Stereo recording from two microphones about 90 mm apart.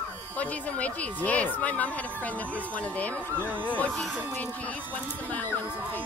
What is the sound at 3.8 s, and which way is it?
Speech, 5° left (ahead or behind).